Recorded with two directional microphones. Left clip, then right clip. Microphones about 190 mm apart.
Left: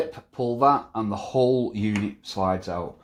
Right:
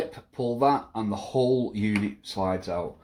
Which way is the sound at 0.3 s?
25° left (ahead or behind).